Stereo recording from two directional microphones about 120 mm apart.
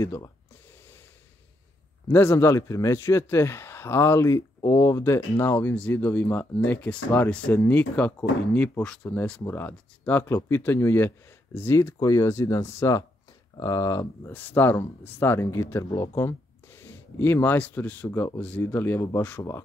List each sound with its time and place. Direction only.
0.0 s speech: 25° left (ahead or behind)
2.0 s speech: 20° left (ahead or behind)